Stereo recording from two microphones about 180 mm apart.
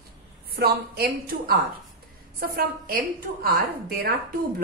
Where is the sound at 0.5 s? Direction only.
60° right (ahead or behind).